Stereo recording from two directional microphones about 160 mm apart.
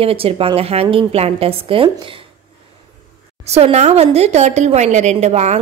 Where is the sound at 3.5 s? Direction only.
40° right (ahead or behind).